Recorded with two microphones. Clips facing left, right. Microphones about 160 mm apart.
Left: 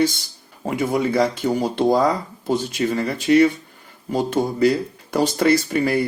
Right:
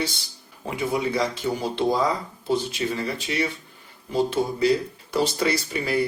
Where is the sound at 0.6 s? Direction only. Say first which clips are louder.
Left 5 dB; 45° left (ahead or behind).